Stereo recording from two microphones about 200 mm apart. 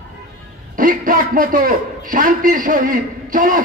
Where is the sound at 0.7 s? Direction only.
45° right (ahead or behind).